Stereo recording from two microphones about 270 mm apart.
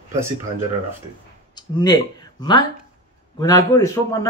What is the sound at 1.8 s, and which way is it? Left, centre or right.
Speech, centre.